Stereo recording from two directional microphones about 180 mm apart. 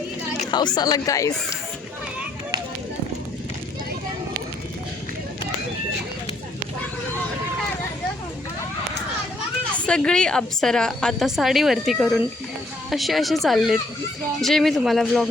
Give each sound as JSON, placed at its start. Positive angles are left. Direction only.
{"t": 0.5, "sound": "speech", "side_deg": 25}
{"t": 9.7, "sound": "a woman's voice", "side_deg": 5}